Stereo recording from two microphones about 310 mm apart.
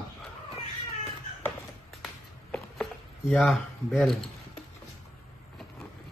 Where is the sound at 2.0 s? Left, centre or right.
Centre.